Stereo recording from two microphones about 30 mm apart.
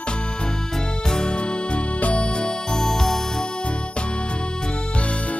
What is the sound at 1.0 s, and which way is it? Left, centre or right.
Music, left.